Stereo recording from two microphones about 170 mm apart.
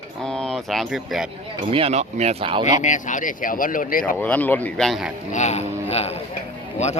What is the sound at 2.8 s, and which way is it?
Speech, 45° left (ahead or behind).